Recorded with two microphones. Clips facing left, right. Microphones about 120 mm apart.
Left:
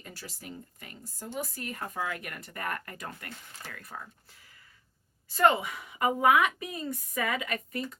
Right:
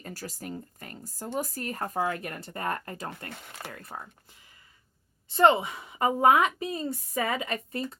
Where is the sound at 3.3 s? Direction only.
65° right (ahead or behind).